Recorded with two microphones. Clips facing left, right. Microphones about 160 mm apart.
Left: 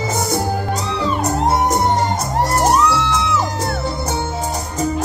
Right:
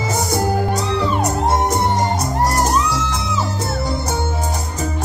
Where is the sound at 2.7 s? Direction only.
70° left (ahead or behind).